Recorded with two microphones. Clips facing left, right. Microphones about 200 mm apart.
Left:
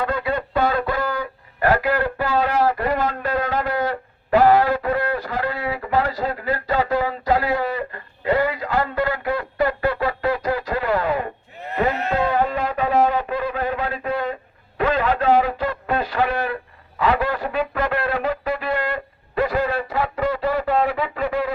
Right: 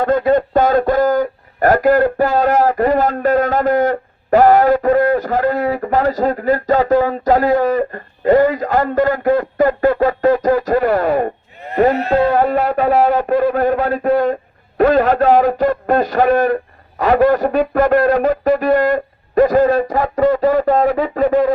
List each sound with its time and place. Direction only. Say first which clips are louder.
0.0 s speech: right 10 dB; 45° right (ahead or behind)